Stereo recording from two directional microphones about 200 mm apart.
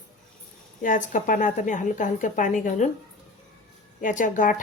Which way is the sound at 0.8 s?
40° left (ahead or behind).